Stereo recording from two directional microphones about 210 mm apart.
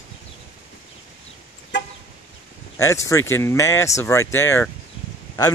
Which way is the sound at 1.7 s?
60° left (ahead or behind).